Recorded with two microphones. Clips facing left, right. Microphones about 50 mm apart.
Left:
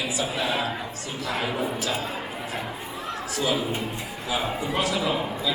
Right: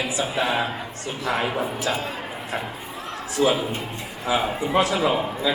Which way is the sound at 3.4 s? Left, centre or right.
Right.